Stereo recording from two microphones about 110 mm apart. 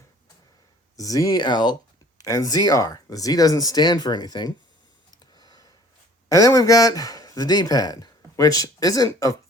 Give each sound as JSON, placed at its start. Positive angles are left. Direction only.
{"t": 0.9, "sound": "speech", "side_deg": 30}
{"t": 5.4, "sound": "a sound", "side_deg": 35}
{"t": 6.2, "sound": "speech", "side_deg": 30}